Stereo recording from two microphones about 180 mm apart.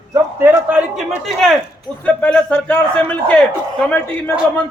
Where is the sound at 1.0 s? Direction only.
Centre (ahead or behind).